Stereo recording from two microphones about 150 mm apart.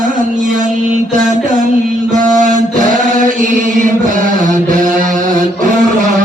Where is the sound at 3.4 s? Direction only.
60° right (ahead or behind).